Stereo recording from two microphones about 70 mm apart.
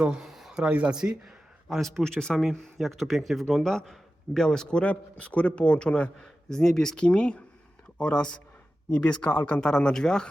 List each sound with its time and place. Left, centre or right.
0.0 s a sound: centre
0.5 s speech: centre
1.7 s speech: centre